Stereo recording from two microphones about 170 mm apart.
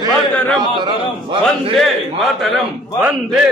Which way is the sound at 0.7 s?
25° right (ahead or behind).